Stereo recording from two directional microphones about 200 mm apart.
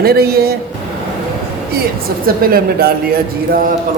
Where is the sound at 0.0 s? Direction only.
50° right (ahead or behind).